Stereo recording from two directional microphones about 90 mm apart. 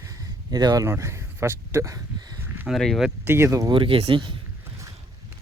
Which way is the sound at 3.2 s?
30° right (ahead or behind).